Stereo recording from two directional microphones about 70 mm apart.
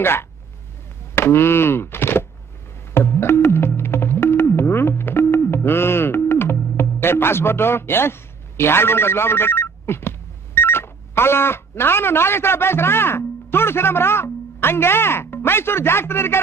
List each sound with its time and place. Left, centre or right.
0.0 s speech: left
2.9 s music: left